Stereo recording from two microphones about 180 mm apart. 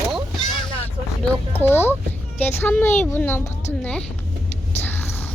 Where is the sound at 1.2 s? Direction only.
10° left (ahead or behind).